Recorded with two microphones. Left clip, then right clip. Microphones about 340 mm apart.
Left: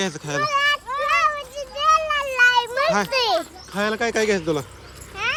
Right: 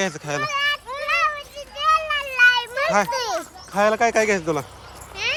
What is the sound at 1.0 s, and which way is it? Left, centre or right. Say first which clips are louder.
Children playing: left 1 dB; left.